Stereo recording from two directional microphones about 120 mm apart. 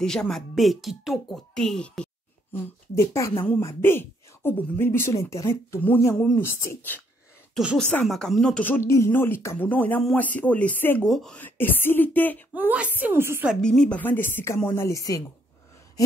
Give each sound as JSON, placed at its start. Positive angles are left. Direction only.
{"t": 0.0, "sound": "speech", "side_deg": 5}
{"t": 2.5, "sound": "speech", "side_deg": 25}
{"t": 7.5, "sound": "speech", "side_deg": 0}
{"t": 8.6, "sound": "speech", "side_deg": 20}
{"t": 11.1, "sound": "speech", "side_deg": 0}
{"t": 11.3, "sound": "speech", "side_deg": 15}
{"t": 12.5, "sound": "a woman's voice", "side_deg": -10}
{"t": 13.6, "sound": "speech", "side_deg": 5}